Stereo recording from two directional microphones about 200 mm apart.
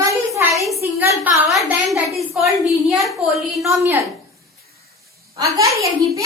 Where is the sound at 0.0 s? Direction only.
15° right (ahead or behind); by 3.8 s centre (ahead or behind).